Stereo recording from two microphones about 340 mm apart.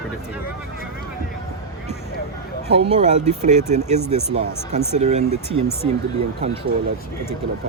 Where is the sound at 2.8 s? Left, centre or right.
Centre.